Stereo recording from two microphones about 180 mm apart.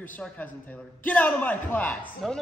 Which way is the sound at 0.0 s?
10° left (ahead or behind).